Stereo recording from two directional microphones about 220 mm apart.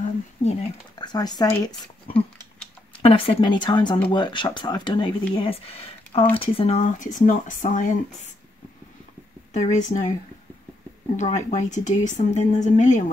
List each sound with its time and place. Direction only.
0.4 s speech: 25° left (ahead or behind)
2.1 s a sound: 5° left (ahead or behind)
3.0 s a woman's voice: 25° left (ahead or behind)
9.5 s speech: 30° left (ahead or behind)
11.1 s speech: 30° left (ahead or behind)